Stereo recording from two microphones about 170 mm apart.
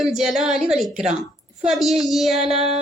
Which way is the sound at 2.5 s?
35° right (ahead or behind).